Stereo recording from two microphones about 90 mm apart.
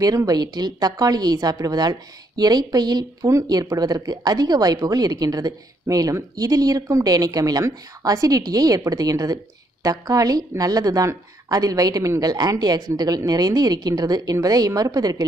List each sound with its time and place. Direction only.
0.0 s a woman's voice: 40° right (ahead or behind)